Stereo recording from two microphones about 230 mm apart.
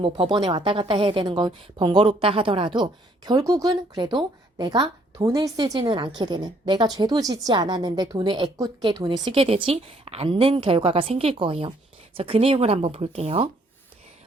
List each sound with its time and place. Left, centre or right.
0.0 s a woman's voice: right